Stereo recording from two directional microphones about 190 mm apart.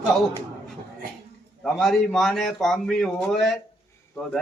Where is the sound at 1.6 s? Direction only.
Centre (ahead or behind).